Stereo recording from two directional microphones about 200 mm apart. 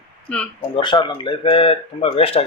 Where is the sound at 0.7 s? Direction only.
25° left (ahead or behind).